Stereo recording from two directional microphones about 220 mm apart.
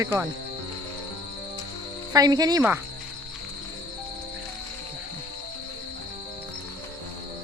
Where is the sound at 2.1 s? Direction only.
15° right (ahead or behind).